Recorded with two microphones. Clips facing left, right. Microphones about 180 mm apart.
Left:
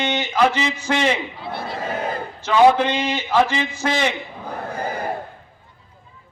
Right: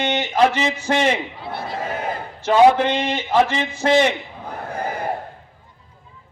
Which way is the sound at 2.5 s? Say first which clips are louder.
Right 1 dB; 55° right (ahead or behind).